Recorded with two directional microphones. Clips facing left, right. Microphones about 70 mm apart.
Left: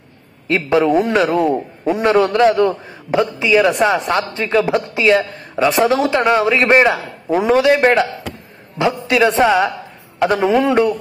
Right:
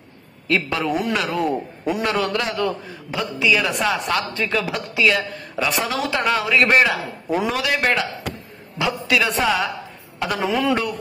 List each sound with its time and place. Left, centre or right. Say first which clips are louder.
0.5 s a man's voice: left 7 dB; left